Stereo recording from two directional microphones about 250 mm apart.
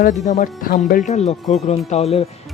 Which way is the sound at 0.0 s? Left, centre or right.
Left.